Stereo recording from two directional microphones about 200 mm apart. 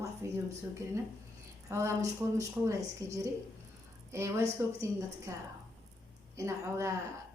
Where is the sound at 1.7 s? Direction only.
15° right (ahead or behind).